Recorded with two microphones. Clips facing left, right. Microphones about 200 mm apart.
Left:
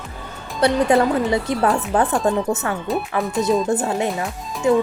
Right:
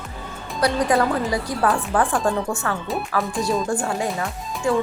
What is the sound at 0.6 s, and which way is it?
Speech, 25° left (ahead or behind).